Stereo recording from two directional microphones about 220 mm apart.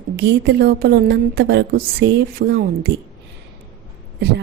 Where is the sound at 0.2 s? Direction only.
50° right (ahead or behind).